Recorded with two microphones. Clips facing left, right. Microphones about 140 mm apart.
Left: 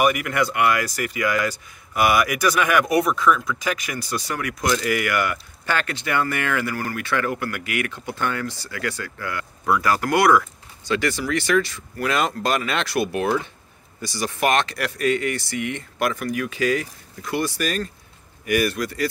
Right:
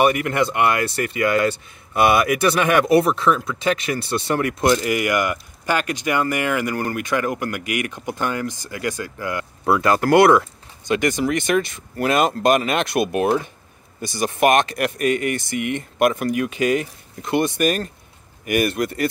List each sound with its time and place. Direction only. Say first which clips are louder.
0.0 s speech: right 3 dB; 30° right (ahead or behind)